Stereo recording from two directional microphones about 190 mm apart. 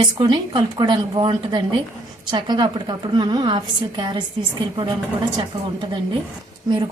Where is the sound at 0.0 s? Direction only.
25° right (ahead or behind).